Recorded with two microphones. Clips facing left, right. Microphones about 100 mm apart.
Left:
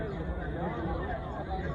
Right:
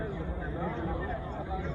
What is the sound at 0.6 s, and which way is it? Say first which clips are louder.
Vehicle: even; 20° left (ahead or behind).